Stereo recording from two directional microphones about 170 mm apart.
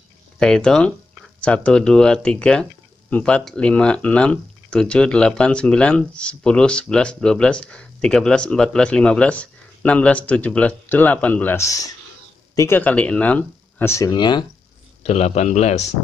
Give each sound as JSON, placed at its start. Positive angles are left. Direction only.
{"t": 0.4, "sound": "speech", "side_deg": 5}
{"t": 15.0, "sound": "speech", "side_deg": 40}